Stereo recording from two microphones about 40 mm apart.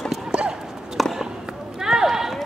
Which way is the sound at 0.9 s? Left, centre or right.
Centre.